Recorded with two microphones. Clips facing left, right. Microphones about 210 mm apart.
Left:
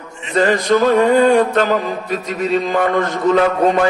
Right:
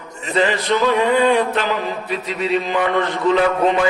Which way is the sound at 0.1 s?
40° right (ahead or behind).